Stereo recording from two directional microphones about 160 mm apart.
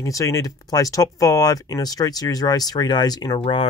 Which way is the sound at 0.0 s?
20° left (ahead or behind).